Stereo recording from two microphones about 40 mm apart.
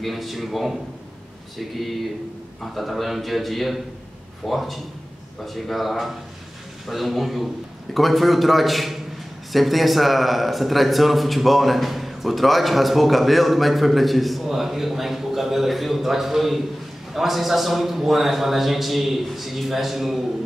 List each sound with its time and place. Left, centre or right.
0.0 s a man's voice: centre